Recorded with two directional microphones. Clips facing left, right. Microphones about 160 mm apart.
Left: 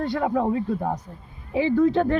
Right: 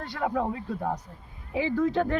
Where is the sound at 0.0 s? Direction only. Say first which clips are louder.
Left 6 dB; 25° left (ahead or behind).